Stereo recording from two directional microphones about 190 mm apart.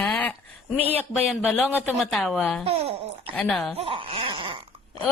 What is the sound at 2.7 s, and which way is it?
Speech, 30° right (ahead or behind).